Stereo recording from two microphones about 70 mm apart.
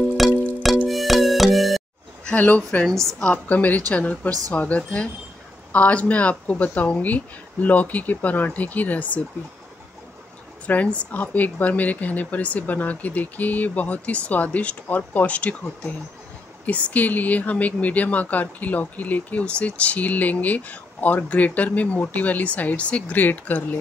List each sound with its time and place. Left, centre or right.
0.2 s music: centre
2.2 s speech: left
10.7 s speech: left